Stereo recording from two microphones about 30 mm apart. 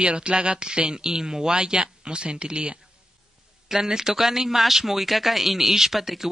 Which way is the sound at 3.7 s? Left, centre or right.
Centre.